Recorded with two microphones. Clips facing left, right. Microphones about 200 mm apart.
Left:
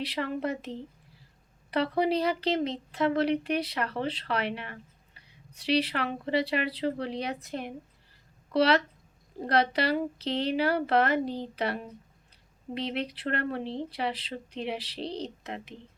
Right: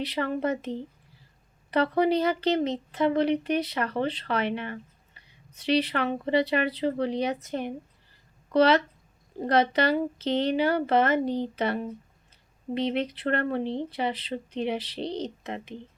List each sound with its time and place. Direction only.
0.1 s speech: centre (ahead or behind)
2.0 s speech: centre (ahead or behind)